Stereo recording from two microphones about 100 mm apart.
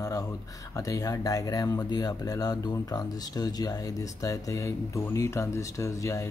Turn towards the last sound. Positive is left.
turn(degrees=30)  # may be behind; listen again after turning